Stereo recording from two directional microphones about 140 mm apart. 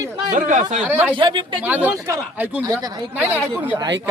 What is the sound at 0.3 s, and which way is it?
Speech, 65° right (ahead or behind).